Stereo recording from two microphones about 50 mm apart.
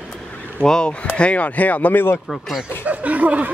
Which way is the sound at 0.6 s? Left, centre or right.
Centre.